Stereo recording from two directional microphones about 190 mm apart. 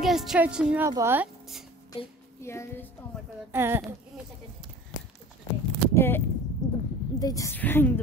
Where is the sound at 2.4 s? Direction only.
15° left (ahead or behind).